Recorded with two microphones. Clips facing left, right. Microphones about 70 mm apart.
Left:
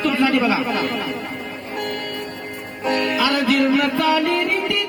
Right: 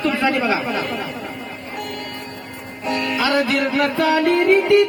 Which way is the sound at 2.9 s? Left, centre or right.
Left.